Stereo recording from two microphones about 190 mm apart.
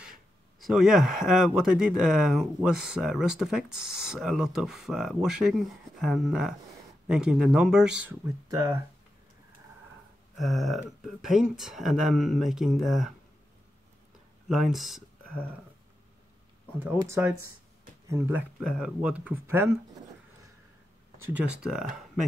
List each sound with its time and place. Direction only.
0.0 s speech: centre (ahead or behind)
10.3 s speech: centre (ahead or behind)
14.5 s speech: centre (ahead or behind)
16.8 s speech: 15° right (ahead or behind)
21.3 s speech: 5° right (ahead or behind)